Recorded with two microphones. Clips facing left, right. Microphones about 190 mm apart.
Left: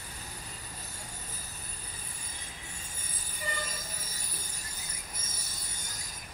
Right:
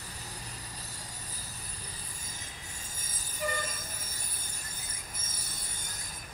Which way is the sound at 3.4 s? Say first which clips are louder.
Right 6 dB; 55° right (ahead or behind).